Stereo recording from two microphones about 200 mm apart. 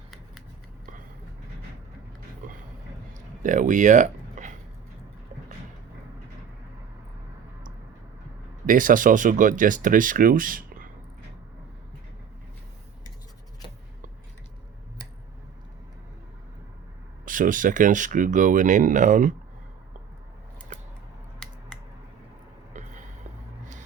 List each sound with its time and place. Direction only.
3.4 s speech: 40° right (ahead or behind)
8.6 s speech: 40° right (ahead or behind)
17.2 s speech: 45° right (ahead or behind)
21.3 s scissors: centre (ahead or behind)
22.7 s a sound: 35° right (ahead or behind)